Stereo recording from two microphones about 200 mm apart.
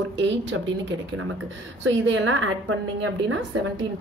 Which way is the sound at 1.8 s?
65° right (ahead or behind).